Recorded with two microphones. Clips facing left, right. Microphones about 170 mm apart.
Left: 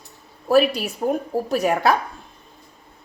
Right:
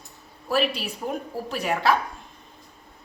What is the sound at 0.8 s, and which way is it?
Speech, 45° left (ahead or behind).